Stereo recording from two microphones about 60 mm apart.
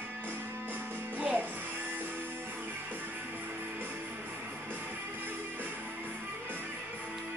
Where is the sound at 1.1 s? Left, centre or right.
Right.